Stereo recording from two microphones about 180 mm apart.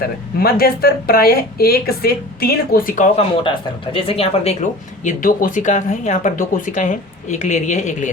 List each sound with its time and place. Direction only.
0.0 s speech: 55° left (ahead or behind)
3.9 s speech: 30° left (ahead or behind)
5.0 s speech: 45° left (ahead or behind)